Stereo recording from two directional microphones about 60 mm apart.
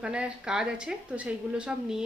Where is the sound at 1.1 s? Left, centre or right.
Right.